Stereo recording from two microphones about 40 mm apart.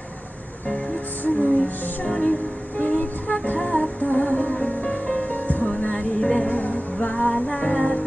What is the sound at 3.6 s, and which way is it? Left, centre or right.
Humming, left.